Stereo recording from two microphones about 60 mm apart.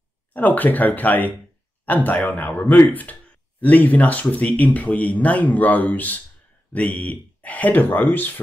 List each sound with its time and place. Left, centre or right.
0.3 s speech: left